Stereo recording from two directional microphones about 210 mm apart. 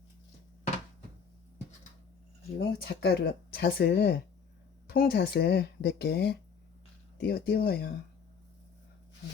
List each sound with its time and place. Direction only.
2.6 s speech: 50° left (ahead or behind)